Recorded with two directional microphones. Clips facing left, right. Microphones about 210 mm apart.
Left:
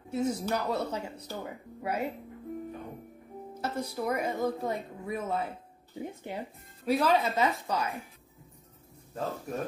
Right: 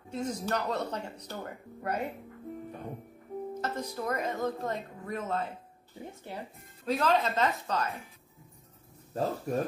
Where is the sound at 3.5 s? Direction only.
10° left (ahead or behind).